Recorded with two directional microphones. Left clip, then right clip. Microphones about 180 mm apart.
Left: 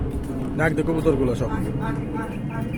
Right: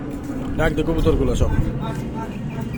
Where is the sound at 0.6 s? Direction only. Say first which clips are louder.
Right 1 dB; 15° left (ahead or behind).